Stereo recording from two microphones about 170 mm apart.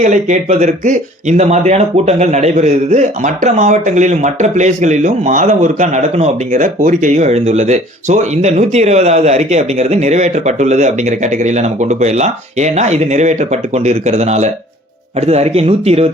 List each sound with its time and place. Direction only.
0.0 s speech: 45° right (ahead or behind)